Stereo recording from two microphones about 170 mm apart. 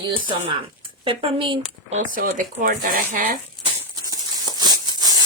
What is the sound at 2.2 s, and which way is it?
Speech, 55° right (ahead or behind).